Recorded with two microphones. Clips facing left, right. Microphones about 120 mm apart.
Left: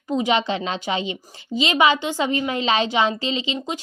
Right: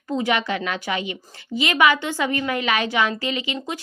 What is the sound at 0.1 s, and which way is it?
A woman's voice, 15° left (ahead or behind).